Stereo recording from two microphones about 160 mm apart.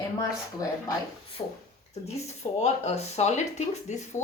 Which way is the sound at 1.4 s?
35° left (ahead or behind).